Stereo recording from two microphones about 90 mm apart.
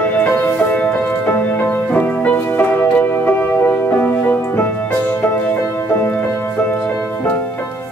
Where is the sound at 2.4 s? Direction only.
20° left (ahead or behind).